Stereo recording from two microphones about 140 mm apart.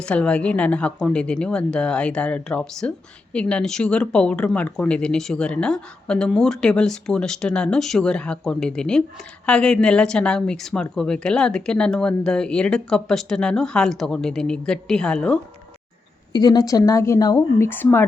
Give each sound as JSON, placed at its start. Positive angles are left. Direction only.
{"t": 0.0, "sound": "a woman's voice", "side_deg": 5}
{"t": 16.3, "sound": "speech", "side_deg": 30}